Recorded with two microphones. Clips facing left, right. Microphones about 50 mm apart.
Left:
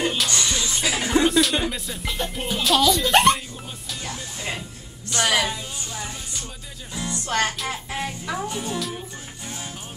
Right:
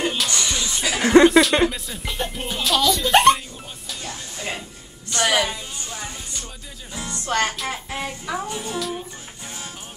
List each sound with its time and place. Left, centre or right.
0.0 s music: centre
1.0 s a sound: right
1.7 s speech: centre
3.9 s music: centre
5.1 s speech: centre
6.9 s speech: centre